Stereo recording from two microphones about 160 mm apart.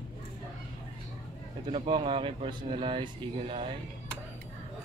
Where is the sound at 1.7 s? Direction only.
30° right (ahead or behind).